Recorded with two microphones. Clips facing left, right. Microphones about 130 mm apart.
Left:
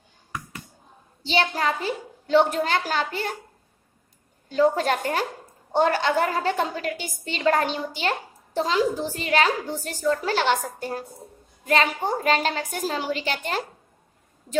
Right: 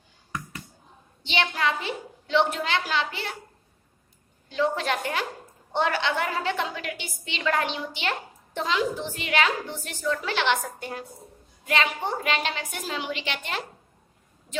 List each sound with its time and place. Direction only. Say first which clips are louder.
1.2 s a woman's voice: left 3 dB; 35° left (ahead or behind)
4.4 s a woman's voice: left 5 dB; 40° left (ahead or behind)